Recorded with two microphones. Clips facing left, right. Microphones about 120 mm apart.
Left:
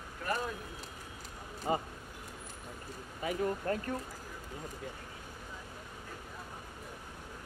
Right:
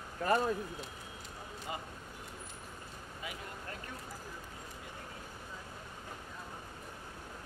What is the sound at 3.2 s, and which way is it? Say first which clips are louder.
Speech: left 14 dB; 45° left (ahead or behind).